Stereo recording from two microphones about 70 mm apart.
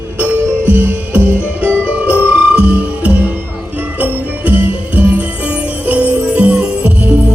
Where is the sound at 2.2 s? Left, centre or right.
Centre.